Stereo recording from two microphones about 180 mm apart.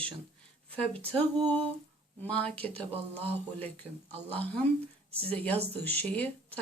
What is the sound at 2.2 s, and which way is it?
A woman's voice, 5° left (ahead or behind).